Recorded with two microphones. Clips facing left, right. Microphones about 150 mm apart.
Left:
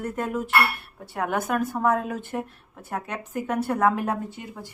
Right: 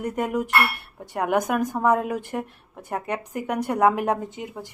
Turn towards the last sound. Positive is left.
turn(degrees=-15)  # may be behind; listen again after turning